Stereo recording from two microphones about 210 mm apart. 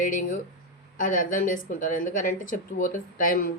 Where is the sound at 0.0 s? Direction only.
40° left (ahead or behind).